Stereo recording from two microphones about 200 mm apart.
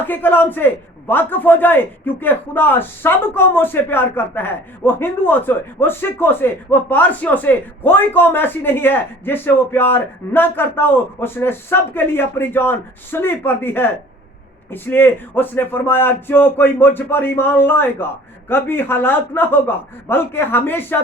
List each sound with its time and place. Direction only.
0.0 s a man's voice: 10° left (ahead or behind)